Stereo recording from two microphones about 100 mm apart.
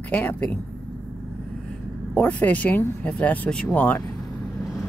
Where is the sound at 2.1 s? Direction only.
15° left (ahead or behind).